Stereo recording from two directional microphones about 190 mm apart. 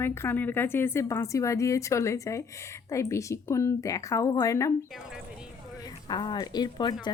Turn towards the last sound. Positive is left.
turn(degrees=20)  # may be behind; listen again after turning